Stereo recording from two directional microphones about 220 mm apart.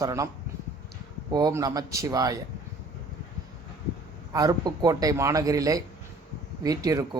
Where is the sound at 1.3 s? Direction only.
20° right (ahead or behind).